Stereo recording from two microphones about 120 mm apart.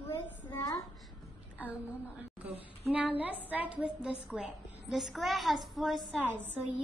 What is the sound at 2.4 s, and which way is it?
A woman's voice, 10° right (ahead or behind).